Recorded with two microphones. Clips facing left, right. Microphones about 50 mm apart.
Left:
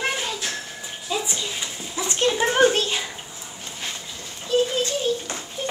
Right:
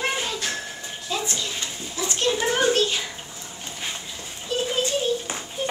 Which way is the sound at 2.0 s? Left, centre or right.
Left.